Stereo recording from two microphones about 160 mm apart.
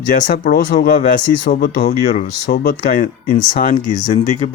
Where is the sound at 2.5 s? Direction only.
70° left (ahead or behind).